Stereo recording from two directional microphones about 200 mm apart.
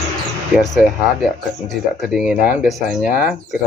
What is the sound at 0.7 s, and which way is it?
Speech, centre (ahead or behind).